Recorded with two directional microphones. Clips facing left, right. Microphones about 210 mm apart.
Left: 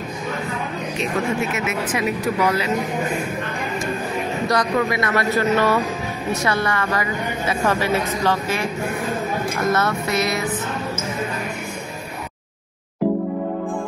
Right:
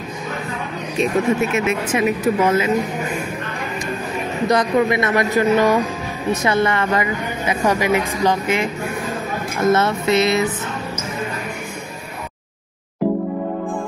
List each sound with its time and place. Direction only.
1.5 s a woman's voice: 25° right (ahead or behind)
4.5 s a woman's voice: 20° right (ahead or behind)